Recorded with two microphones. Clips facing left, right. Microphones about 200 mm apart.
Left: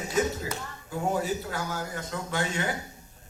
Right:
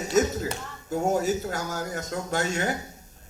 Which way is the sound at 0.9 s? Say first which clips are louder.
Right 4 dB; 45° right (ahead or behind).